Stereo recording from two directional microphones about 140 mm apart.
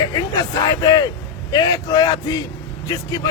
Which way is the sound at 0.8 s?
30° left (ahead or behind).